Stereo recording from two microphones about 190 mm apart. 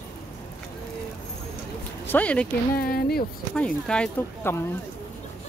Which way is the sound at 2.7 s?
50° left (ahead or behind).